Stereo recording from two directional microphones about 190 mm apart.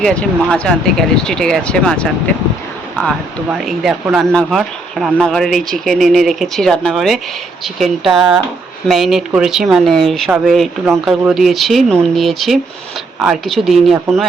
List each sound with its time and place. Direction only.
0.0 s speech: 5° left (ahead or behind)
3.6 s speech: centre (ahead or behind)